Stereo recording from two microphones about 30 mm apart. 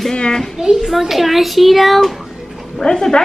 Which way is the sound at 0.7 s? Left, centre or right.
Centre.